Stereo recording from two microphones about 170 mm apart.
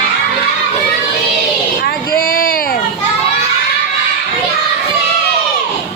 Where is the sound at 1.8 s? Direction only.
60° left (ahead or behind).